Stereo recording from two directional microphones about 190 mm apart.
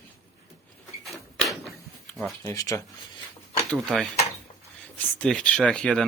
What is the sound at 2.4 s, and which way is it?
Speech, 20° left (ahead or behind).